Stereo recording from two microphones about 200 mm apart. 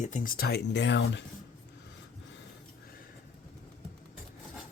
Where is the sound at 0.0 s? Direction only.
40° left (ahead or behind); by 1.2 s 60° left (ahead or behind).